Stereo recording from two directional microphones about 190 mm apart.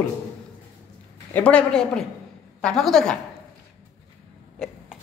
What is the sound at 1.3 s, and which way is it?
A man's voice, 5° left (ahead or behind).